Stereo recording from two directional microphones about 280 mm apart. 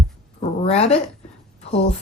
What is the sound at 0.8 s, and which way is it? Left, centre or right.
Speech, left.